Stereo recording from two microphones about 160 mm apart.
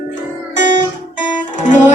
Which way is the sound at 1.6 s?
50° left (ahead or behind).